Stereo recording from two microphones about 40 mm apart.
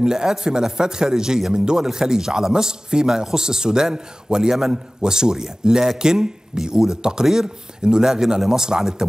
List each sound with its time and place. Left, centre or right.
0.0 s a man's voice: centre